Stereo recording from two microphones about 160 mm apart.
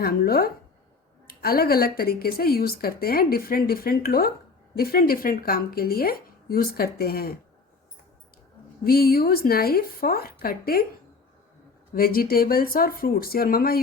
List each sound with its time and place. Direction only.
0.0 s speech: 70° left (ahead or behind)
8.8 s speech: 70° left (ahead or behind)
11.9 s speech: 65° left (ahead or behind)